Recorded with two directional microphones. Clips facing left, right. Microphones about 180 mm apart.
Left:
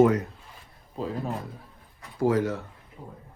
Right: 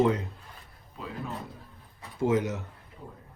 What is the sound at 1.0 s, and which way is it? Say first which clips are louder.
Speech: left 7 dB; 35° left (ahead or behind).